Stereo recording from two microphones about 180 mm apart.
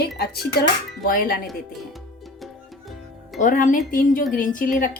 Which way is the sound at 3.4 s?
45° left (ahead or behind).